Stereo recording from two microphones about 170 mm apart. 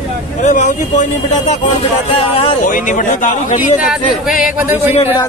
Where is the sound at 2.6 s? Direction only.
50° left (ahead or behind).